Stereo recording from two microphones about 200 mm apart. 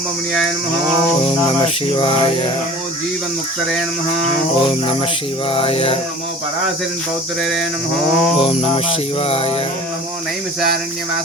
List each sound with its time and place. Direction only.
1.6 s music: 25° left (ahead or behind)
5.5 s music: 25° left (ahead or behind)
8.4 s music: 30° left (ahead or behind)